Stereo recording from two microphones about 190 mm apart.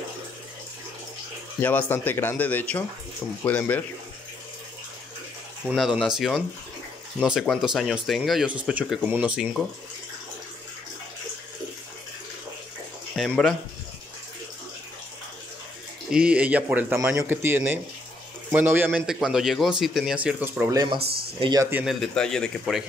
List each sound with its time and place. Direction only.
1.6 s speech: 10° left (ahead or behind)
5.7 s speech: centre (ahead or behind)
13.1 s speech: centre (ahead or behind)
16.1 s speech: 5° right (ahead or behind)
20.7 s speech: 20° right (ahead or behind)
21.0 s speech: 55° right (ahead or behind)
21.4 s speech: 20° right (ahead or behind)
21.6 s speech: 10° right (ahead or behind)
22.0 s speech: 5° left (ahead or behind)